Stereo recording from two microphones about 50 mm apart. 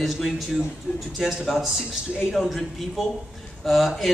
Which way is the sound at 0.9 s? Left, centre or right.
Left.